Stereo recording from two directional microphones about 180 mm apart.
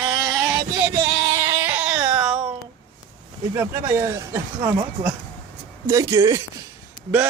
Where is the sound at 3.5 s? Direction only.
15° right (ahead or behind).